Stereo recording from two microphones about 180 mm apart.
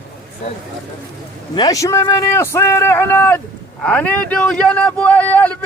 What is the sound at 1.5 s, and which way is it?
A man's voice, 20° left (ahead or behind).